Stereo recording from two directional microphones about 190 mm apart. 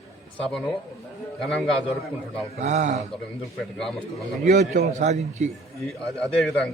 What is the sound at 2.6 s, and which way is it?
Speech, 40° right (ahead or behind).